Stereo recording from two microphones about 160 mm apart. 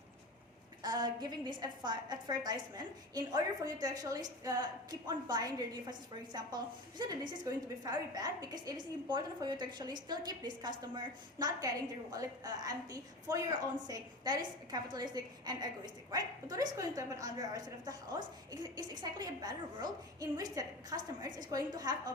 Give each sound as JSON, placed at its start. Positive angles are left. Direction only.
{"t": 0.8, "sound": "a woman's voice", "side_deg": -25}